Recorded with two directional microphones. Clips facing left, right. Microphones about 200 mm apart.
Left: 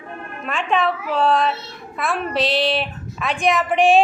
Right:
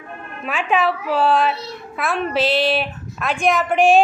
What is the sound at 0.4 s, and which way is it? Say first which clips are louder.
A woman's voice: right 1 dB; 5° right (ahead or behind).